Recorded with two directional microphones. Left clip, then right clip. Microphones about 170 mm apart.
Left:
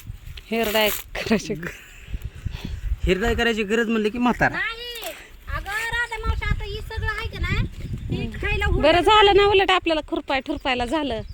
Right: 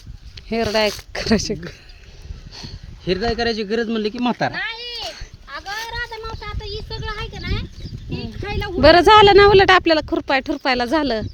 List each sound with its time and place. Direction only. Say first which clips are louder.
0.3 s speech: right 2 dB; 20° right (ahead or behind)
3.0 s a man's voice: right 1 dB; 10° right (ahead or behind)
4.2 s speech: left 2 dB; 20° right (ahead or behind)
4.5 s a sound: right 1 dB; 65° left (ahead or behind)
8.1 s a sound: left 1 dB; 30° right (ahead or behind)
8.8 s speech: right 6 dB; 45° right (ahead or behind)